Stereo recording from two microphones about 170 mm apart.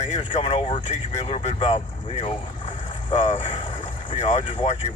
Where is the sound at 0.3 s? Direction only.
35° left (ahead or behind).